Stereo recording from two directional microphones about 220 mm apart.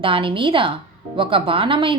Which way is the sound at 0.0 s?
25° right (ahead or behind).